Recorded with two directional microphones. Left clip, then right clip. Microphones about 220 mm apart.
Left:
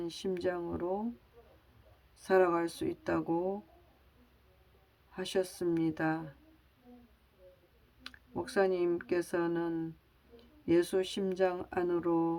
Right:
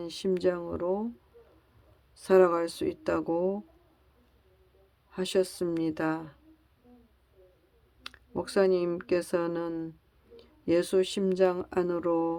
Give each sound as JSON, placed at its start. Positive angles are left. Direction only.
{"t": 0.0, "sound": "speech", "side_deg": -30}
{"t": 2.1, "sound": "speech", "side_deg": -30}
{"t": 5.1, "sound": "speech", "side_deg": -30}
{"t": 8.0, "sound": "speech", "side_deg": -30}